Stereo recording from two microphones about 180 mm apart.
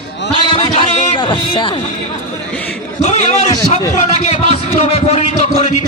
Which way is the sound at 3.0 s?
40° left (ahead or behind).